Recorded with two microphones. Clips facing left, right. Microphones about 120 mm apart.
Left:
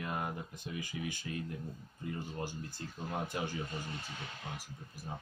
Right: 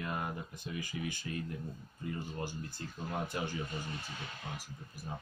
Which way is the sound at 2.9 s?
10° left (ahead or behind).